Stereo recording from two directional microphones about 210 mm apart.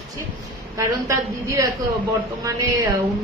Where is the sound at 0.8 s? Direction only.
15° right (ahead or behind).